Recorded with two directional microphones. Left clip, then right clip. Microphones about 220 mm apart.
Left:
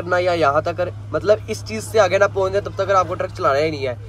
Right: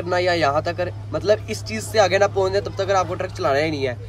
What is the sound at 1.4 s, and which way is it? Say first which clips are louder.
Speech: left 2 dB; 40° right (ahead or behind).